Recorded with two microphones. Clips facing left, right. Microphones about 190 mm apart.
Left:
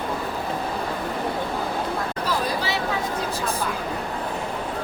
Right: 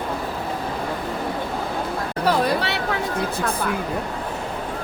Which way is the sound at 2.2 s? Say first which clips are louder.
Right 8 dB; 65° right (ahead or behind).